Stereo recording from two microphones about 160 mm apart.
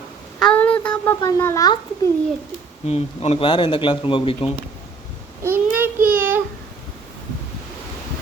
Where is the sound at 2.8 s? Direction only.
40° left (ahead or behind).